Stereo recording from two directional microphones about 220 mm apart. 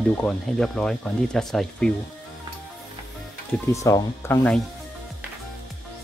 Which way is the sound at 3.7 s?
15° left (ahead or behind).